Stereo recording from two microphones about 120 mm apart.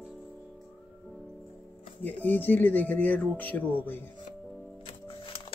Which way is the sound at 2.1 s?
15° left (ahead or behind).